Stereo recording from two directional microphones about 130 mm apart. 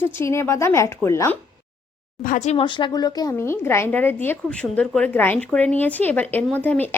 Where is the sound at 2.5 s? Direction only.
40° left (ahead or behind).